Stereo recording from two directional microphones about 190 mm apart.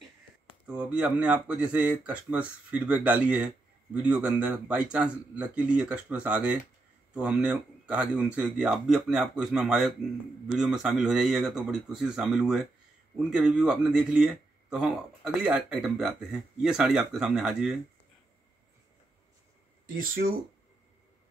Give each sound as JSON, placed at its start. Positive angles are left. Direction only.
{"t": 0.5, "sound": "speech", "side_deg": -5}
{"t": 20.0, "sound": "speech", "side_deg": -50}